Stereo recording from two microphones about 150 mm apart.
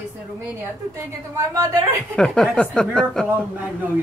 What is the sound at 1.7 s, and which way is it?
A woman's voice, 5° left (ahead or behind).